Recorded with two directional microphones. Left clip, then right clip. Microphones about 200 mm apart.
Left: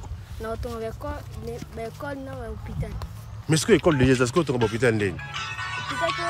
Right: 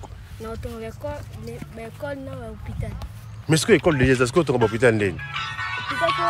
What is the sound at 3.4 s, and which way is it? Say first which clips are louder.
Speech: right 2 dB; 10° left (ahead or behind).